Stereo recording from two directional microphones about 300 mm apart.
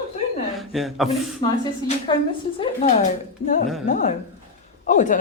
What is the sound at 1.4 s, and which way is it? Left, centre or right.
A woman's voice, centre.